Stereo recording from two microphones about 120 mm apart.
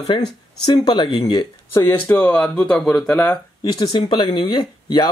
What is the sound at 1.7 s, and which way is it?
Speech, 15° left (ahead or behind).